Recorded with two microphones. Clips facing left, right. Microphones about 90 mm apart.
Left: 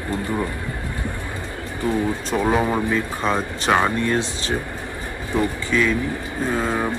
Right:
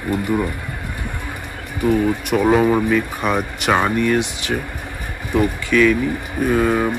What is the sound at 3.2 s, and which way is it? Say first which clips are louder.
Speech: right 2 dB; 20° left (ahead or behind).